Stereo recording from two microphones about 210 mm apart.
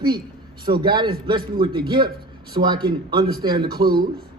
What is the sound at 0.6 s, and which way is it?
Speech, 20° right (ahead or behind).